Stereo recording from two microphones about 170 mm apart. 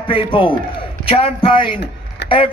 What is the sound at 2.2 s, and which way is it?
Vehicle, 85° left.